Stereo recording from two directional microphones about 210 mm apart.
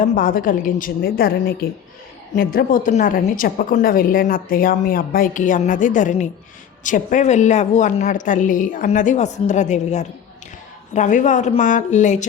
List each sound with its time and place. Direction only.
0.0 s a woman's voice: 40° left (ahead or behind)